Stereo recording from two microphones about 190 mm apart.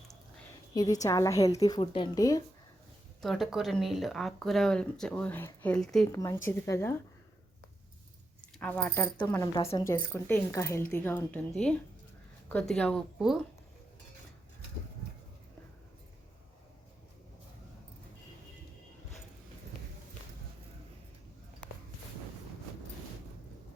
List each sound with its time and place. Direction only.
0.7 s a woman's voice: 20° left (ahead or behind)
3.2 s speech: centre (ahead or behind)
6.1 s speech: 15° left (ahead or behind)
8.4 s speech: 5° left (ahead or behind)
9.1 s speech: 15° left (ahead or behind); by 13.4 s centre (ahead or behind)